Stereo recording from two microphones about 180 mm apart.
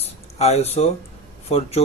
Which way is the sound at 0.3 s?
35° left (ahead or behind).